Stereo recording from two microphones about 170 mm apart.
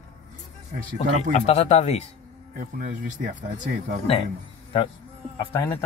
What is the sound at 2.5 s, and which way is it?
Speech, 55° right (ahead or behind).